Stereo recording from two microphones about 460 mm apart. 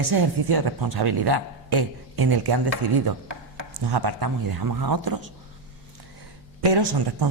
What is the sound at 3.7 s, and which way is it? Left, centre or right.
Speech, right.